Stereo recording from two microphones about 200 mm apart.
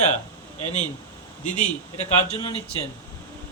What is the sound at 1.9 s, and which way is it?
Speech, 30° left (ahead or behind).